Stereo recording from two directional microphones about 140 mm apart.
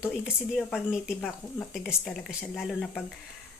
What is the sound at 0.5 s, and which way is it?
Speech, 5° right (ahead or behind).